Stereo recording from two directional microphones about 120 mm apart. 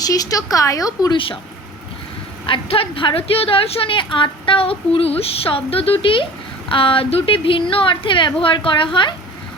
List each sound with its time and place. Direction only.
0.0 s a woman's voice: 30° left (ahead or behind)
1.1 s a woman's voice: 45° left (ahead or behind)
2.5 s a woman's voice: 50° left (ahead or behind)